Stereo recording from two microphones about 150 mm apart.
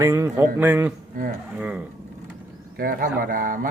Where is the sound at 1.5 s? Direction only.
10° right (ahead or behind).